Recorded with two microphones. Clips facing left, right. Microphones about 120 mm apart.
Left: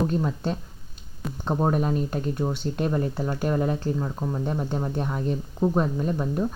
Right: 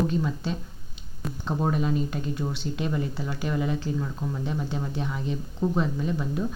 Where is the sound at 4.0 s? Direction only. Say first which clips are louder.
Left 2 dB; 25° left (ahead or behind).